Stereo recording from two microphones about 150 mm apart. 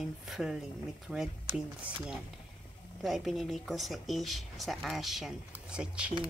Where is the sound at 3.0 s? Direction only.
Centre (ahead or behind).